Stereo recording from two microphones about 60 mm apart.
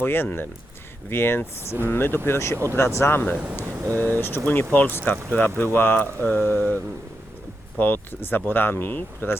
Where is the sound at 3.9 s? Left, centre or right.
Left.